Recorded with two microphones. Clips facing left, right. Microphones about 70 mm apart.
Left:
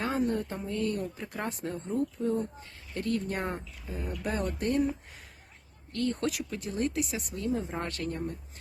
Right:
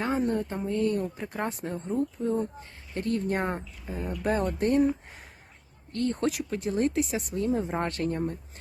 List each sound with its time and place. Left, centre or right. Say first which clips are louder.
0.4 s speech: right 4 dB; right